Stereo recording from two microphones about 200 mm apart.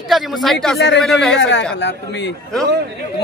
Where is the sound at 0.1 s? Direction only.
Centre (ahead or behind).